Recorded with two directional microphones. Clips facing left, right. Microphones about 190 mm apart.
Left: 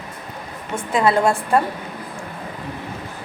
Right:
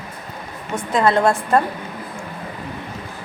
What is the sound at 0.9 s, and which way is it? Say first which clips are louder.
Speech: right 1 dB; 5° left (ahead or behind).